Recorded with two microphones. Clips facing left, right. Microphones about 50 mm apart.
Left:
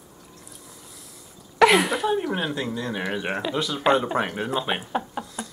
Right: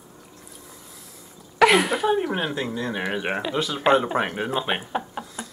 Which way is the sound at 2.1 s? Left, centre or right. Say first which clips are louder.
Right 1 dB; centre.